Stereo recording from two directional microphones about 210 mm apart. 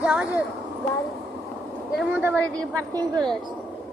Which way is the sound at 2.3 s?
5° left (ahead or behind).